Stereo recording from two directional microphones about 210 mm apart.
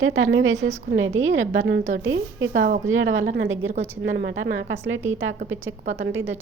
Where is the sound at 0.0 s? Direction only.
70° right (ahead or behind).